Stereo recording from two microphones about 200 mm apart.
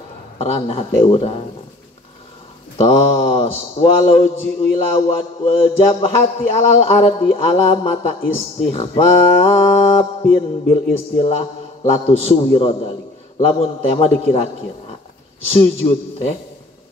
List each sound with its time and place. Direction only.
0.4 s mantra: 30° left (ahead or behind)
2.8 s mantra: 30° left (ahead or behind)
6.5 s speech: 30° left (ahead or behind)
15.5 s speech: 30° left (ahead or behind)